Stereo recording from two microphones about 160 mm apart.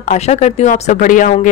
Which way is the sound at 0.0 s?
45° left (ahead or behind).